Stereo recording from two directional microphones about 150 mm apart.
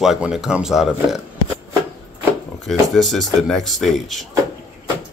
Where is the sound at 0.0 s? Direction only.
5° right (ahead or behind).